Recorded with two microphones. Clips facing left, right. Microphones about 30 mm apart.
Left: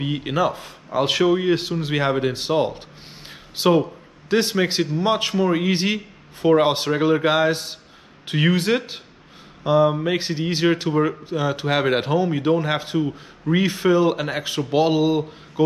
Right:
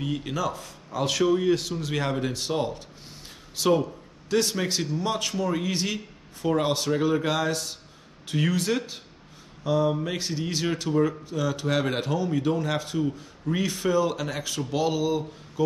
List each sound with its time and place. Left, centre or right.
0.0 s a man's voice: left